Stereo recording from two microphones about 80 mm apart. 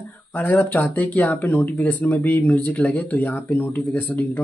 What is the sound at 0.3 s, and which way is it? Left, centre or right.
Speech, left.